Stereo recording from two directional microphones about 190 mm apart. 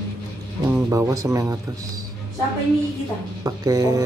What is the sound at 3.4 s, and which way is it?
Speech, 20° right (ahead or behind).